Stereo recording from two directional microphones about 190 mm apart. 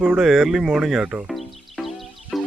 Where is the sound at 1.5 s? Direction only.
Centre (ahead or behind).